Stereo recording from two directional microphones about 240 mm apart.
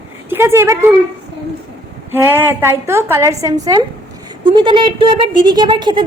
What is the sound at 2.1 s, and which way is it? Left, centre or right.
A woman's voice, centre.